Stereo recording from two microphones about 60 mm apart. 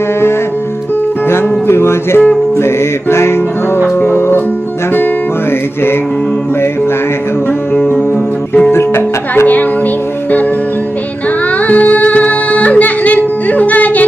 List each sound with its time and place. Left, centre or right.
1.3 s music: left
7.7 s music: left
11.6 s music: left